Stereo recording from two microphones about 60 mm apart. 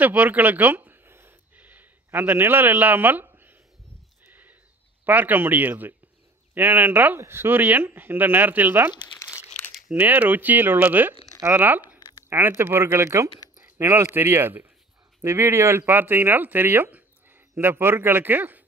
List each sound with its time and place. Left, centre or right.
0.0 s a sound: right
2.0 s a man's voice: right
4.3 s a sound: right
5.0 s speech: right
7.2 s speech: right
9.9 s speech: right
14.1 s speech: right